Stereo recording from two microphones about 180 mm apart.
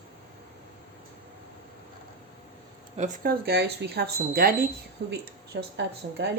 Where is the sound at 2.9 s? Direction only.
40° right (ahead or behind).